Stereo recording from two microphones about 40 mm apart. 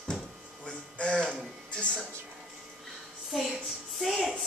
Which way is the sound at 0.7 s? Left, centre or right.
Left.